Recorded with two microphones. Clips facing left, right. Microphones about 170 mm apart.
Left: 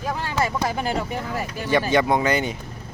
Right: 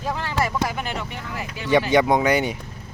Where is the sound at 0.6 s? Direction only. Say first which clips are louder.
Left 4 dB; 35° left (ahead or behind).